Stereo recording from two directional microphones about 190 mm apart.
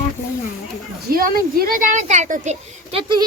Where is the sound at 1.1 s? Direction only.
50° right (ahead or behind).